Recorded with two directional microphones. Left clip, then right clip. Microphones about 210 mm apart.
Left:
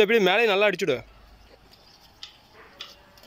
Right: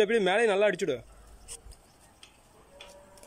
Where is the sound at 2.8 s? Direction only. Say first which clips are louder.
Left 8 dB; 60° right (ahead or behind).